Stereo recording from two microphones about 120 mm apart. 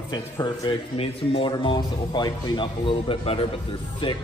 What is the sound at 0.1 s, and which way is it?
Speech, 35° left (ahead or behind).